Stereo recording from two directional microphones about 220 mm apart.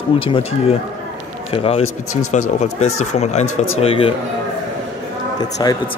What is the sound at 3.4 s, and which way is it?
Speech, 65° left (ahead or behind).